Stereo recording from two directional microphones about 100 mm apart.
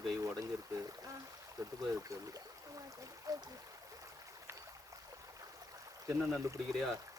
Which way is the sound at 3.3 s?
35° right (ahead or behind).